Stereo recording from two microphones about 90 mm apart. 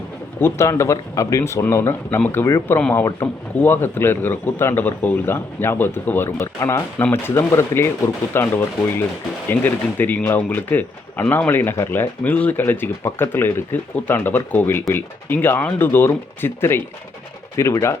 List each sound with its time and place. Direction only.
0.3 s speech: 30° left (ahead or behind)